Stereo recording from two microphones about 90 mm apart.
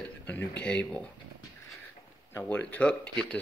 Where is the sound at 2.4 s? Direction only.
15° left (ahead or behind).